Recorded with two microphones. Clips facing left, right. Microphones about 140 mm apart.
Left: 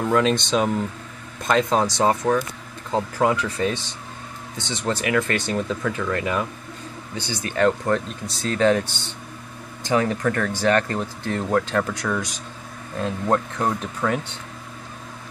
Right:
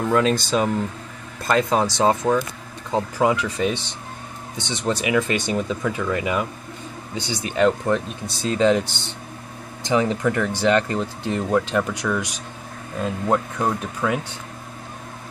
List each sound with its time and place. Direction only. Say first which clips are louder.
0.0 s speech: even; centre (ahead or behind)
1.9 s speech: right 1 dB; 20° right (ahead or behind)
9.8 s speech: right 1 dB; 15° right (ahead or behind)
12.0 s speech: right 1 dB; centre (ahead or behind)